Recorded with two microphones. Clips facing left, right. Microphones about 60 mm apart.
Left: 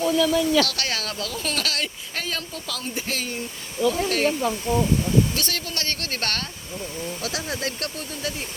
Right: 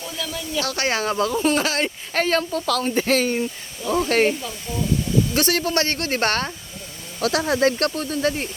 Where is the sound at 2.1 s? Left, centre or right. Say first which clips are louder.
Right 13 dB; right.